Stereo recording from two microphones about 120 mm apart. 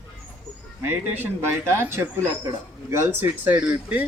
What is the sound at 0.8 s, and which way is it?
Speech, 15° right (ahead or behind).